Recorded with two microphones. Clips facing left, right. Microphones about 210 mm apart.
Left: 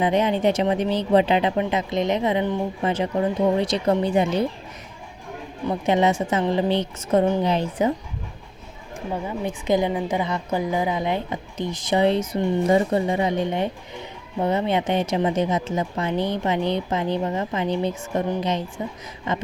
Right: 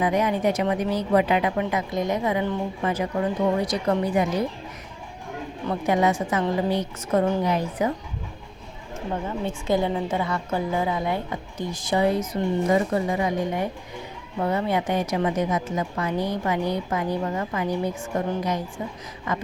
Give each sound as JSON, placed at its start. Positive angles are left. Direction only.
{"t": 0.0, "sound": "a woman's voice", "side_deg": 25}
{"t": 5.6, "sound": "a woman's voice", "side_deg": 25}
{"t": 9.2, "sound": "a woman's voice", "side_deg": 15}